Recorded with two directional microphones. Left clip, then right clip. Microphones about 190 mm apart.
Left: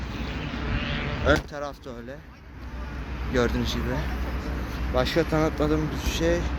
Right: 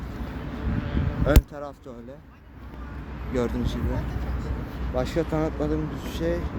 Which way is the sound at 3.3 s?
15° right (ahead or behind).